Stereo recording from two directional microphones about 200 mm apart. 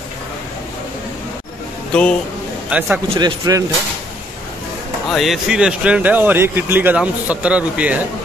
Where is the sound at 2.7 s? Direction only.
5° right (ahead or behind).